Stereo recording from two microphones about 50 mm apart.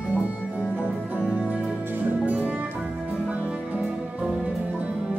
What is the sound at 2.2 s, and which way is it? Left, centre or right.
Music, right.